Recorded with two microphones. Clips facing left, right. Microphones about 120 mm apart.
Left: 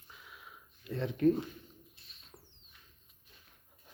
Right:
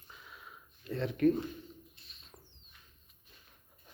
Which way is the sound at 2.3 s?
10° right (ahead or behind).